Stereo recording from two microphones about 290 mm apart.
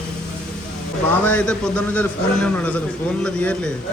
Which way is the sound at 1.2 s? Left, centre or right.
Centre.